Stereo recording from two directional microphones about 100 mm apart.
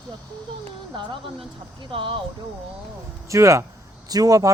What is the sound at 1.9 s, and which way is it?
Speech, 65° right (ahead or behind).